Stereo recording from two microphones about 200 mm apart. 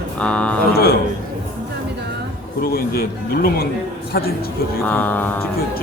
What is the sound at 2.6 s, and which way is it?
Speech, 50° left (ahead or behind).